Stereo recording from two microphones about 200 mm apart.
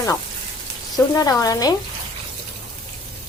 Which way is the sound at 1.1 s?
15° left (ahead or behind).